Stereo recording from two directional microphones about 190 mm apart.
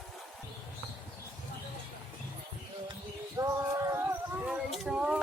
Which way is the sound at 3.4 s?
15° right (ahead or behind).